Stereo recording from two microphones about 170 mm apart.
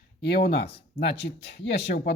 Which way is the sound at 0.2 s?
70° left (ahead or behind).